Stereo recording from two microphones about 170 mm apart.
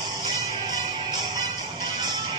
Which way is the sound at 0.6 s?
25° right (ahead or behind).